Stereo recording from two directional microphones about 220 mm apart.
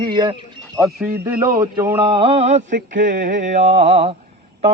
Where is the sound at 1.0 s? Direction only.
10° right (ahead or behind); by 2.7 s 30° right (ahead or behind).